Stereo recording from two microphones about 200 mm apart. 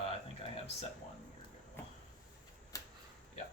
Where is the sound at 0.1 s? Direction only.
30° left (ahead or behind).